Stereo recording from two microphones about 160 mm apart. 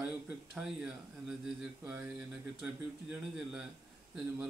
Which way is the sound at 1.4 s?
5° right (ahead or behind).